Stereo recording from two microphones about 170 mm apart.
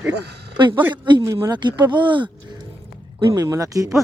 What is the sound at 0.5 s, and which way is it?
Speech, 25° right (ahead or behind).